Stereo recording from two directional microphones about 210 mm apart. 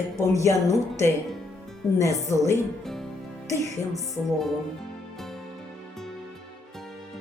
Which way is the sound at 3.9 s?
Centre (ahead or behind).